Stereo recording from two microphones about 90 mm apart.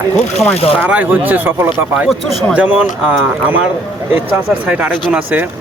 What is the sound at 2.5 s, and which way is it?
Speech, 15° right (ahead or behind).